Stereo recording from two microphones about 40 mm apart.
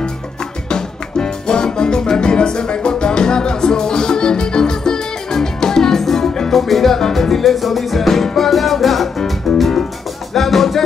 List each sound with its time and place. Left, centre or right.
0.7 s music: centre